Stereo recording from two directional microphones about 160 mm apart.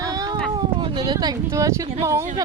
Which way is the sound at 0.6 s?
30° right (ahead or behind).